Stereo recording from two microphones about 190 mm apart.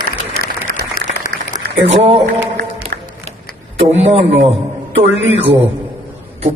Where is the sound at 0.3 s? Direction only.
45° left (ahead or behind).